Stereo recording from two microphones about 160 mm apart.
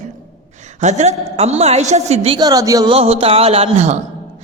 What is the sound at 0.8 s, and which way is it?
A man's voice, 45° right (ahead or behind).